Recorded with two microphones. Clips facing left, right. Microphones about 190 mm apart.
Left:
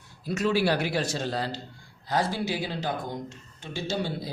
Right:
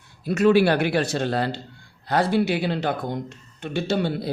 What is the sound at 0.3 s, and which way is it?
Speech, 60° right (ahead or behind).